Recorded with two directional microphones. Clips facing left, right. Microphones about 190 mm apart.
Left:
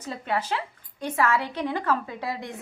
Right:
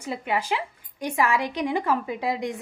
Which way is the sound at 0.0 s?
10° right (ahead or behind).